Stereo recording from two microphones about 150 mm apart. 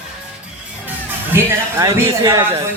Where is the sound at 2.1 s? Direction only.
30° right (ahead or behind).